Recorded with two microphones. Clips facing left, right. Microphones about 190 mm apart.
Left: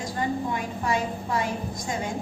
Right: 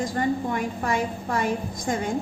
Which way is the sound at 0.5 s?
50° right (ahead or behind).